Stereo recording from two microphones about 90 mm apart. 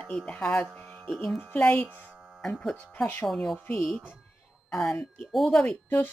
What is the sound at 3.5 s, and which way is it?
Speech, 20° left (ahead or behind).